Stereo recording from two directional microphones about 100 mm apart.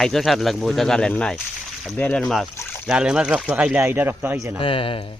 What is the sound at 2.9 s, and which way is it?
Speech, 10° right (ahead or behind).